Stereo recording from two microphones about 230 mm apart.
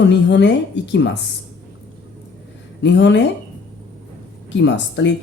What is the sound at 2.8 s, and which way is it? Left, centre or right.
Speech, left.